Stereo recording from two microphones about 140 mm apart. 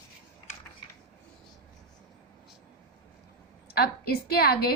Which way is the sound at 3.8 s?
90° left.